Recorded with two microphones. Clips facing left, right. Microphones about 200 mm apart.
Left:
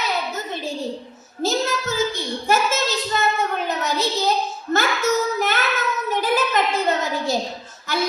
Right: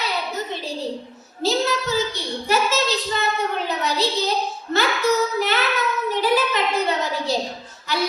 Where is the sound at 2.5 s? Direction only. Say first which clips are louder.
Even; 50° left (ahead or behind).